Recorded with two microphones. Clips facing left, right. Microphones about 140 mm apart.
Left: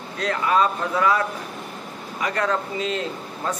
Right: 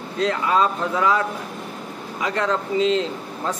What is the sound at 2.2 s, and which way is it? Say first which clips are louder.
Speech: right 1 dB; 20° right (ahead or behind).